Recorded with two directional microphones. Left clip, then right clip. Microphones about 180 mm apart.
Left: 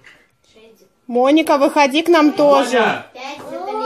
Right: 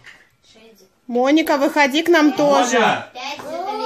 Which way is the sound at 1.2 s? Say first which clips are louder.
Left 3 dB; 5° left (ahead or behind).